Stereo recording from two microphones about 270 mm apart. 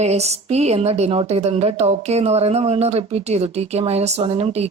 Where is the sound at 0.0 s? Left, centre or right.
Right.